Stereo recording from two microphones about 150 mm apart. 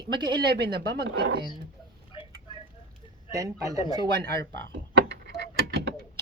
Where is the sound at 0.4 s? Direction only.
90° right.